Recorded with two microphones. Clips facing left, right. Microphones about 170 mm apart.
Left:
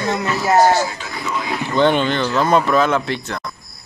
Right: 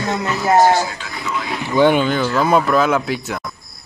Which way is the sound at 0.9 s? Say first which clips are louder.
Even; 5° left (ahead or behind).